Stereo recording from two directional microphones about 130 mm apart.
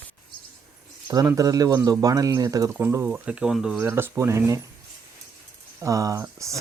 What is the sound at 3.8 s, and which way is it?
Speech, 20° right (ahead or behind).